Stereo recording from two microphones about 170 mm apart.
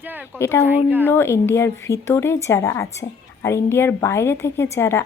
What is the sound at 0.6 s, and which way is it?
Speech, 10° right (ahead or behind).